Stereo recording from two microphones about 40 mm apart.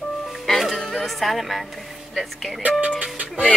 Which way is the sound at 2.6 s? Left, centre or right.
Right.